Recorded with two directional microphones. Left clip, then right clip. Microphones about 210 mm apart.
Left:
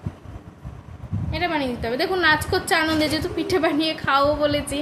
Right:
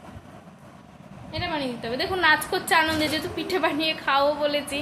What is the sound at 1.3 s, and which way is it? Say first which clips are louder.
A woman's voice: left 5 dB; 20° left (ahead or behind).